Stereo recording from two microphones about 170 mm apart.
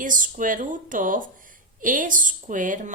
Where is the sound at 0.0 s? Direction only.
50° right (ahead or behind).